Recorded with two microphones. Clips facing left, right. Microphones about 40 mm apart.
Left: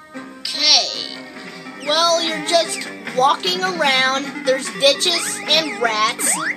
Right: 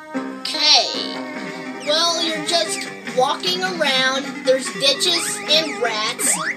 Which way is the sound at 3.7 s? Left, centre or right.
Centre.